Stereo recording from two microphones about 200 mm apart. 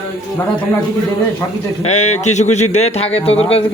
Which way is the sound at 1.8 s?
35° left (ahead or behind).